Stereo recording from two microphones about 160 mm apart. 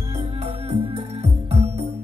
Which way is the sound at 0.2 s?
40° right (ahead or behind).